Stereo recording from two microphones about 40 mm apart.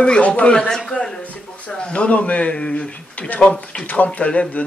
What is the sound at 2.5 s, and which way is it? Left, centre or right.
Speech, left.